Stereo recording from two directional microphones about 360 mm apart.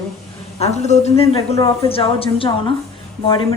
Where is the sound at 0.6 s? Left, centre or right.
Centre.